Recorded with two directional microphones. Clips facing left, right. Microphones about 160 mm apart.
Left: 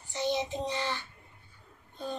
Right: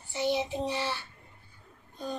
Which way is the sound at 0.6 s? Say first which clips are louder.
Right 1 dB; 15° right (ahead or behind).